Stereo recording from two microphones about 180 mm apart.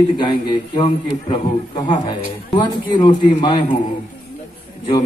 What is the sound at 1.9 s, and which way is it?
A man's voice, 25° left (ahead or behind).